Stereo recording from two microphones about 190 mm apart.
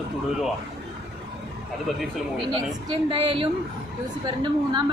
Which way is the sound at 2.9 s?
30° right (ahead or behind).